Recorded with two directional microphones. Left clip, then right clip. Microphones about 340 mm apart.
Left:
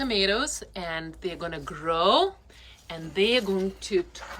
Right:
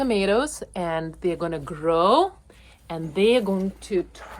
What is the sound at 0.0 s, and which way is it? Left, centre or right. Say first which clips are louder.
A woman's voice: right 3 dB; centre.